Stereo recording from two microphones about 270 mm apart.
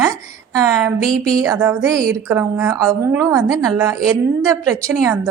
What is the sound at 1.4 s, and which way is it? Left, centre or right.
A woman's voice, centre.